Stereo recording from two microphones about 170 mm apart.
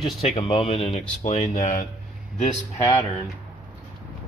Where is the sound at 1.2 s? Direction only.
50° left (ahead or behind).